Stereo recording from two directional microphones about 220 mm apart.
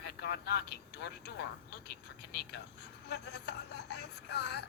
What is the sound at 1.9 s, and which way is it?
A woman's voice, 45° left (ahead or behind).